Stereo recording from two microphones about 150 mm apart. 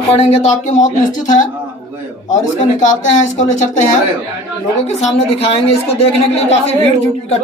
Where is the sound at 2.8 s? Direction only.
55° left (ahead or behind).